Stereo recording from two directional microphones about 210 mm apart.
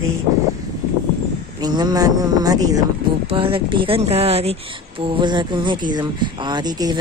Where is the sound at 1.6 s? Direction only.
20° right (ahead or behind).